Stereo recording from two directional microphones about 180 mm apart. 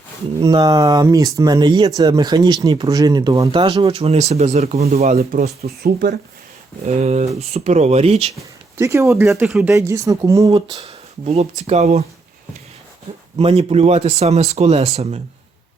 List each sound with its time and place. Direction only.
0.3 s speech: 25° right (ahead or behind)
3.6 s speech: 35° right (ahead or behind)
5.6 s speech: 60° right (ahead or behind)
6.8 s speech: 40° right (ahead or behind)
8.8 s speech: 15° right (ahead or behind)
9.5 s speech: 5° right (ahead or behind)
9.7 s speech: 15° right (ahead or behind)
10.8 s speech: 35° right (ahead or behind)
13.4 s speech: 35° right (ahead or behind)